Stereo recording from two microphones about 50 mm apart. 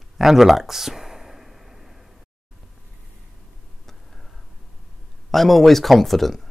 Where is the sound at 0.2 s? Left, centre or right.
Centre.